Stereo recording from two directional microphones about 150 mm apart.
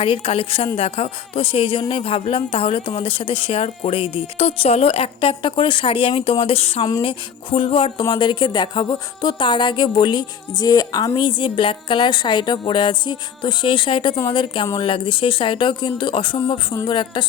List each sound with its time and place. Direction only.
0.0 s speech: 40° left (ahead or behind)